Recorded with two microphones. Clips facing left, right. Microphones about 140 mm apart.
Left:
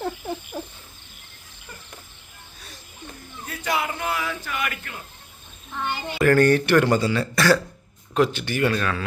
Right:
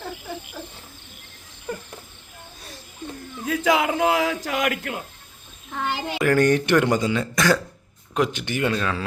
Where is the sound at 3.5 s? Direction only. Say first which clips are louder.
Right 6 dB; 90° right.